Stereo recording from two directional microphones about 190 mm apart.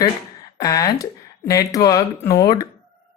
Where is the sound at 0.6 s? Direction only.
20° left (ahead or behind).